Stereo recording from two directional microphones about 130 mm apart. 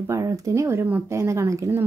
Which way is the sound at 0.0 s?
25° right (ahead or behind).